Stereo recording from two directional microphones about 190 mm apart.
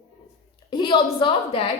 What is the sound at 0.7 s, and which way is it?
A woman's voice, 25° left (ahead or behind).